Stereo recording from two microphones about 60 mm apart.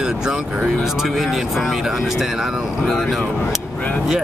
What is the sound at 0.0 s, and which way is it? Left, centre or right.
Vehicle, centre.